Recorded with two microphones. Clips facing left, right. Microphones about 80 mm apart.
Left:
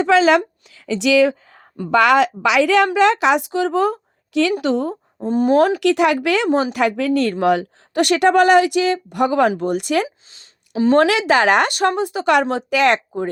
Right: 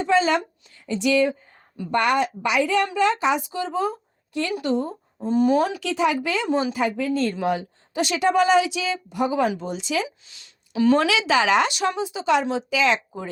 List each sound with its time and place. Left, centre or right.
0.0 s a woman's voice: left
5.2 s speech: left
5.8 s speech: left
10.3 s a sound: left
10.9 s speech: left